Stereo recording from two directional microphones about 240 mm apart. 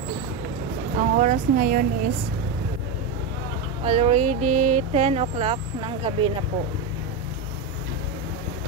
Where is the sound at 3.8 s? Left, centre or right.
Right.